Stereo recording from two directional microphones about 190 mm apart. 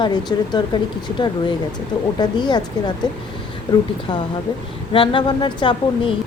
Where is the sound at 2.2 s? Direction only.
25° left (ahead or behind).